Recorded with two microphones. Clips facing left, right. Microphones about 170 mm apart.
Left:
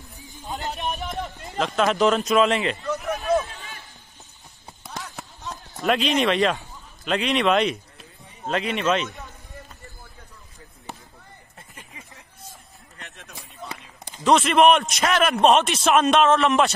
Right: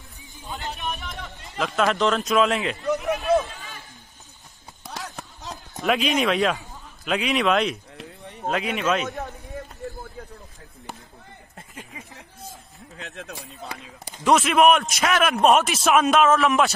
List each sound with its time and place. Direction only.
1.6 s a man's voice: centre (ahead or behind)
5.8 s a man's voice: centre (ahead or behind)
8.0 s a sound: 70° right (ahead or behind)
8.5 s a man's voice: 5° right (ahead or behind)
12.9 s run: 90° right
13.6 s chop: 10° right (ahead or behind)
14.3 s a man's voice: centre (ahead or behind)